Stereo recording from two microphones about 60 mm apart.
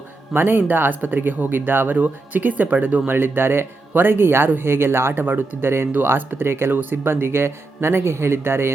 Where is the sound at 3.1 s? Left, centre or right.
Right.